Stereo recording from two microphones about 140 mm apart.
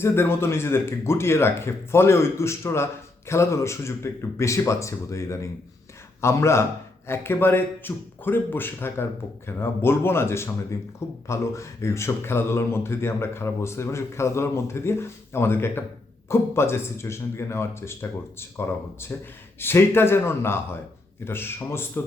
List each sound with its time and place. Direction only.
0.0 s speech: 15° left (ahead or behind)